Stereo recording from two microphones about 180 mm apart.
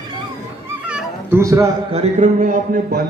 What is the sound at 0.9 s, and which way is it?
Cat, 10° right (ahead or behind).